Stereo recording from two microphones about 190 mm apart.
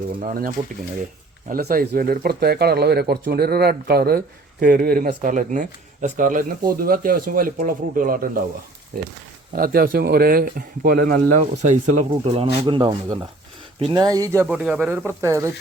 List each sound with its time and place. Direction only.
0.2 s a man's voice: 45° right (ahead or behind)
9.5 s a man's voice: 50° right (ahead or behind); by 14.4 s 20° right (ahead or behind)
14.4 s speech: 5° right (ahead or behind)